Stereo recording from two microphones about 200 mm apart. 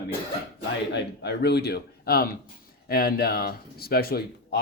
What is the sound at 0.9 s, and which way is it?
A man's voice, 55° left (ahead or behind).